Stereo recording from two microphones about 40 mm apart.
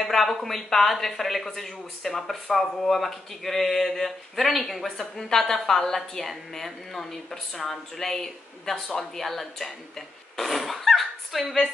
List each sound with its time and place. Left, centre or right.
0.0 s speech: centre